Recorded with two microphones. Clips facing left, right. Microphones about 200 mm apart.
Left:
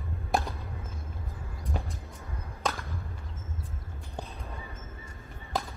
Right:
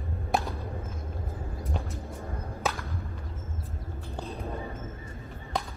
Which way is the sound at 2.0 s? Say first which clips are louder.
Right 7 dB; 50° right (ahead or behind).